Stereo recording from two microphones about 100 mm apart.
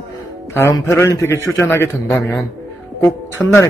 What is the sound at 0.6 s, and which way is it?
A man's voice, 25° left (ahead or behind).